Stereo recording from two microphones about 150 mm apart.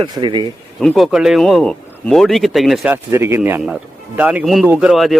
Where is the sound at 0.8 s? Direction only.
Centre (ahead or behind).